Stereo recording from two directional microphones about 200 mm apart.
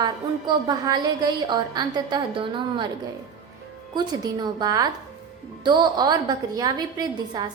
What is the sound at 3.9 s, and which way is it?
A woman's voice, 20° right (ahead or behind).